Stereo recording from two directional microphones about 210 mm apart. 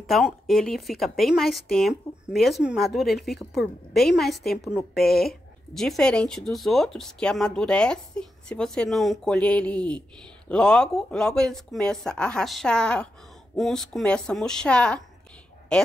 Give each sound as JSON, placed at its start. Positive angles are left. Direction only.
{"t": 0.0, "sound": "speech", "side_deg": 0}